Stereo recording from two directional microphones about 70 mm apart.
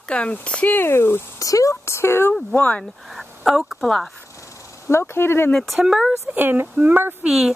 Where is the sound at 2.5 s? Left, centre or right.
Left.